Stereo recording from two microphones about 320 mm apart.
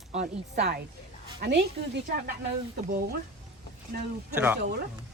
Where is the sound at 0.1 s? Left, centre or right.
Right.